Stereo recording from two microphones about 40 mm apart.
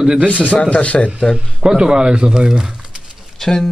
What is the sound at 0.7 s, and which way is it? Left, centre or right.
Speech, left.